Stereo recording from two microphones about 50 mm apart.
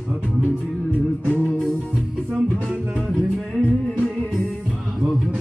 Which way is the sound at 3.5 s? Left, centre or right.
Left.